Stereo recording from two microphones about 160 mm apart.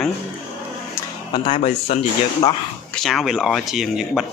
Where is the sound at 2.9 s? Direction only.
Centre (ahead or behind).